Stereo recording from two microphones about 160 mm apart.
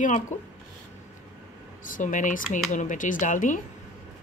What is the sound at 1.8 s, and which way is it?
Speech, 55° left (ahead or behind).